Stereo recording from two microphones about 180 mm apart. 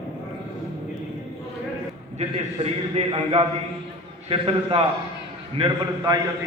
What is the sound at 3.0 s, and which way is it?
A man's voice, 30° right (ahead or behind).